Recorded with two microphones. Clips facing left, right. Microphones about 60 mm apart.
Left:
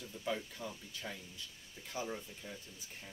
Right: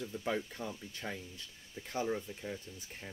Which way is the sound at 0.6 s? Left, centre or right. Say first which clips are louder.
Right 3 dB; right.